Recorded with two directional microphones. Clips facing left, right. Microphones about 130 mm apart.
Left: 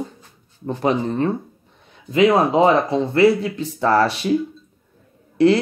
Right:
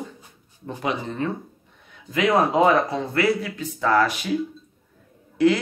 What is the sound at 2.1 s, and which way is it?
Speech, 25° left (ahead or behind).